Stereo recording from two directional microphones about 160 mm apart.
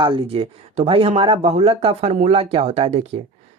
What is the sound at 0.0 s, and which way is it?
Speech, 35° right (ahead or behind).